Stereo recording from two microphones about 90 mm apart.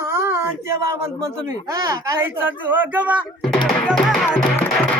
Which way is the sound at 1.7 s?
40° right (ahead or behind).